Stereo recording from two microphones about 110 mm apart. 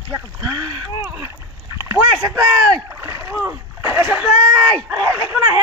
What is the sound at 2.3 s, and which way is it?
Rowboat, 30° right (ahead or behind).